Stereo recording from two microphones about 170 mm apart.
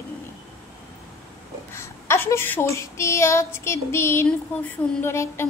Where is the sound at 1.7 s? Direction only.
15° left (ahead or behind).